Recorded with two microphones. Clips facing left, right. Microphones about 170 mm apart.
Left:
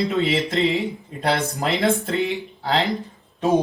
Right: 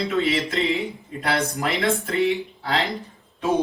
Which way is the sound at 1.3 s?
Centre (ahead or behind).